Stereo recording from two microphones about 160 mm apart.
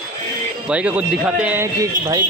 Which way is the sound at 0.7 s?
10° right (ahead or behind).